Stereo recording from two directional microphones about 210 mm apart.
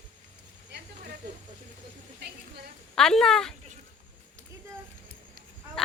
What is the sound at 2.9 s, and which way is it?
Speech, 5° left (ahead or behind).